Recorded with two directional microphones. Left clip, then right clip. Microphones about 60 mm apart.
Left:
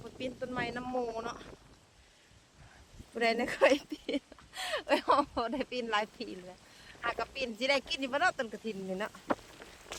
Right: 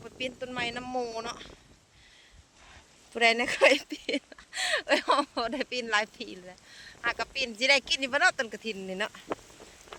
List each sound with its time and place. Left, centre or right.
0.3 s speech: centre
0.9 s speech: centre
3.2 s speech: right
3.8 s speech: centre
4.5 s speech: left
8.4 s speech: centre
9.0 s speech: right
9.4 s a sound: centre